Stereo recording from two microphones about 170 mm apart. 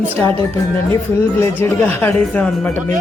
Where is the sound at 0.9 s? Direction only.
15° left (ahead or behind).